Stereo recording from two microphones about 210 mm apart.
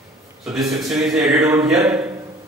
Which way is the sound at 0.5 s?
Centre (ahead or behind).